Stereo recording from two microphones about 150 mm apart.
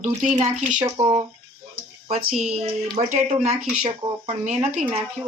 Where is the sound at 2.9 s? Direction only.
50° right (ahead or behind).